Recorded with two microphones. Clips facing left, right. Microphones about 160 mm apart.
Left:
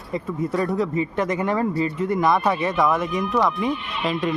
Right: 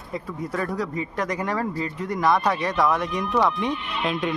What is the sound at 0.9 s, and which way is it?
Speech, centre (ahead or behind).